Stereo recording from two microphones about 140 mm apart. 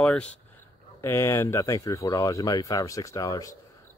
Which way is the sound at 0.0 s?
10° left (ahead or behind).